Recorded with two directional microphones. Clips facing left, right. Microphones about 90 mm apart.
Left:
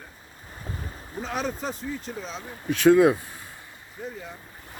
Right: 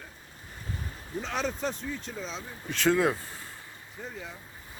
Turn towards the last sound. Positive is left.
turn(degrees=10)  # may be behind; listen again after turning